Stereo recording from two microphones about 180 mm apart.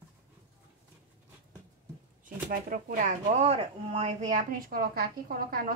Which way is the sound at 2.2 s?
45° right (ahead or behind).